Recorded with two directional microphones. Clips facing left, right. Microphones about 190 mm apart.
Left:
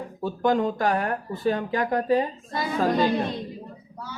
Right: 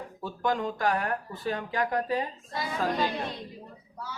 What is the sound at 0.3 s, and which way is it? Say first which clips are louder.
Speech: left 7 dB; 25° left (ahead or behind).